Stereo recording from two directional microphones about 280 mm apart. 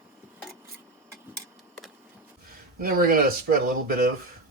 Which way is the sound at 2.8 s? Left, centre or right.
Right.